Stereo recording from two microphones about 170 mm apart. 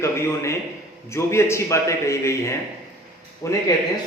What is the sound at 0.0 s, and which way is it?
A man's voice, 15° left (ahead or behind).